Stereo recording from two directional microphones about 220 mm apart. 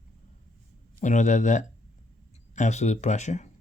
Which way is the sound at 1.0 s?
35° left (ahead or behind).